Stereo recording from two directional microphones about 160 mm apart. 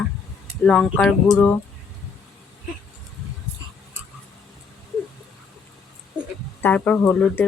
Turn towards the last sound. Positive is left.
turn(degrees=10)  # may be behind; listen again after turning